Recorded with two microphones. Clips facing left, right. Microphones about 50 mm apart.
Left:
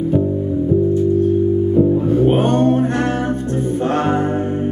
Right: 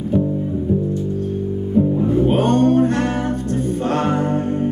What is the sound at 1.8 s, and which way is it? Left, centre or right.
Music, centre.